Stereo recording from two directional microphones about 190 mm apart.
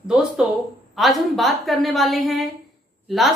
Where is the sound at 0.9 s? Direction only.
Centre (ahead or behind).